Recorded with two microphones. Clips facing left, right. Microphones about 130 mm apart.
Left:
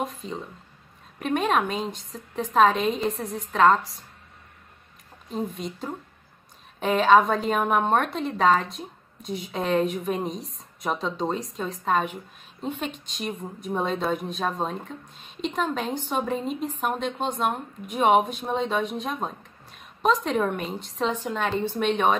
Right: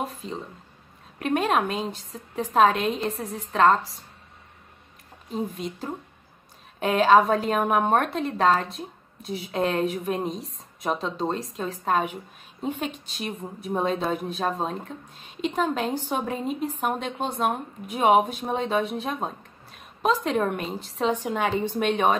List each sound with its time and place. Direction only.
1.2 s a woman's voice: 5° right (ahead or behind)
5.3 s a woman's voice: centre (ahead or behind)
21.1 s a woman's voice: 15° right (ahead or behind)